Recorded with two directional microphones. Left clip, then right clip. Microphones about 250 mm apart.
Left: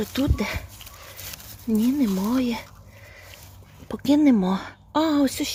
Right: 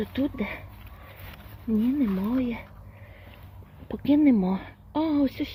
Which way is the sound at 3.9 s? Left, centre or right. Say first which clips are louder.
Left 2 dB; centre.